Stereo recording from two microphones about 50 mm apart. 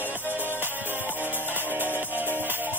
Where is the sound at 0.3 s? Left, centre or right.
Right.